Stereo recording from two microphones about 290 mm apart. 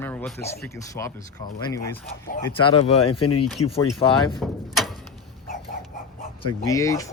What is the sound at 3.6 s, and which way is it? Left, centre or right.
Speech, centre.